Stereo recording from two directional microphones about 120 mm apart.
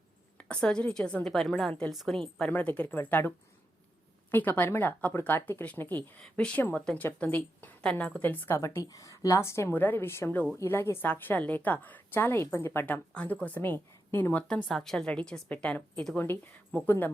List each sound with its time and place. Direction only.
0.3 s a woman's voice: 10° left (ahead or behind)
14.4 s speech: 5° left (ahead or behind)